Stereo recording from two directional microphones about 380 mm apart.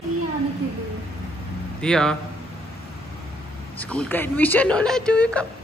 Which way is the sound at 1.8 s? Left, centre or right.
Centre.